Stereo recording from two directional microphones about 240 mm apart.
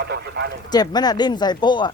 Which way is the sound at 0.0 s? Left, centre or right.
Right.